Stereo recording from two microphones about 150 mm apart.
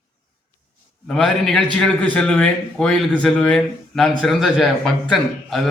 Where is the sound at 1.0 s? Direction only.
5° left (ahead or behind).